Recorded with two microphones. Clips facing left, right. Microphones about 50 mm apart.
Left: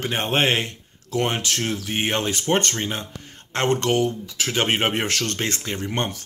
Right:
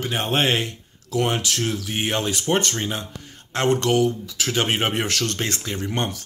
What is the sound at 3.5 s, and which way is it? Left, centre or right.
Speech, left.